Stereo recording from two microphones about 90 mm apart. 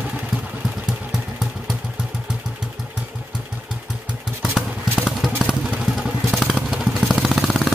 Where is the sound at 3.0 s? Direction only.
15° right (ahead or behind).